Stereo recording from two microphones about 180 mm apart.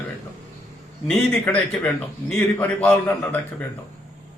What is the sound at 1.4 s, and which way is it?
A man's voice, 10° left (ahead or behind).